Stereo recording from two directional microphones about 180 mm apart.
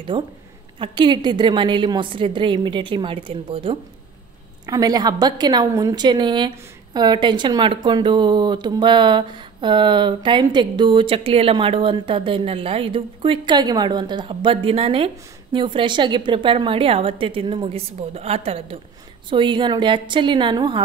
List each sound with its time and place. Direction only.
0.1 s a woman's voice: 25° right (ahead or behind)